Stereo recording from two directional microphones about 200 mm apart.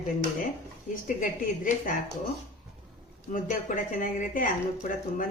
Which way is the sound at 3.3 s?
40° left (ahead or behind).